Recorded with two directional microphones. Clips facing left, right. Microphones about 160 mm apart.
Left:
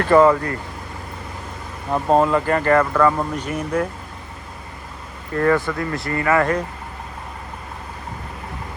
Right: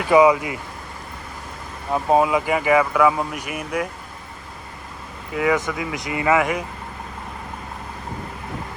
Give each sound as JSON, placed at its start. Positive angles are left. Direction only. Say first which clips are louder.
{"t": 0.0, "sound": "speech", "louder": "left 1 dB", "side_deg": -10}
{"t": 1.9, "sound": "speech", "louder": "left 1 dB", "side_deg": -5}
{"t": 5.3, "sound": "speech", "louder": "left 3 dB", "side_deg": -5}